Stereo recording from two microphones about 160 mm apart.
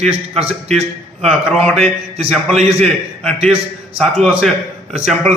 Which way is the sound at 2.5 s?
45° right (ahead or behind).